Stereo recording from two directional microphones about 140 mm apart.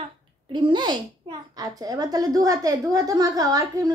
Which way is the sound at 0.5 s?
35° right (ahead or behind).